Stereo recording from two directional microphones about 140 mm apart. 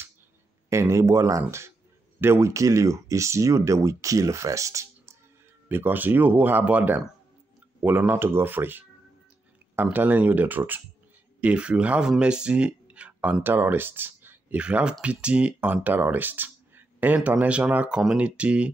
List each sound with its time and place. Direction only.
0.7 s speech: 20° right (ahead or behind)